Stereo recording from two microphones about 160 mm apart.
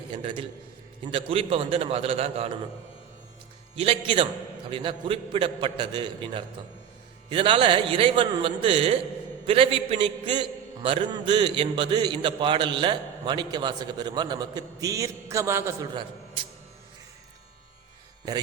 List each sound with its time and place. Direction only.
0.1 s a man's voice: 30° right (ahead or behind)
3.8 s a man's voice: 30° right (ahead or behind)